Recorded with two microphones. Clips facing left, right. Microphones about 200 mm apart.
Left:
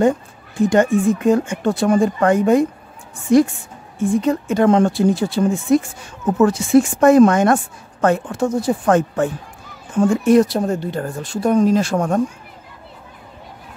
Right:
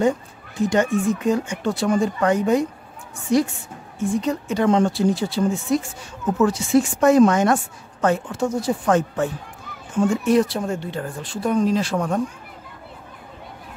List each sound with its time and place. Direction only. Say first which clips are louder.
0.6 s a woman's voice: left 5 dB; 50° left (ahead or behind)